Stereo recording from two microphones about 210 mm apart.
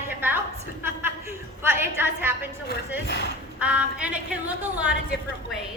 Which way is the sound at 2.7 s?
55° left (ahead or behind).